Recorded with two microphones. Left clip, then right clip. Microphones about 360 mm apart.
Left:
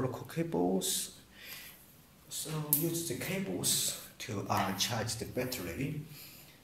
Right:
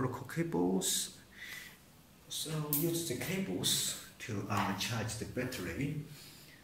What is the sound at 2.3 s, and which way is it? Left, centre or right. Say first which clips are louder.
Speech: right 1 dB; centre.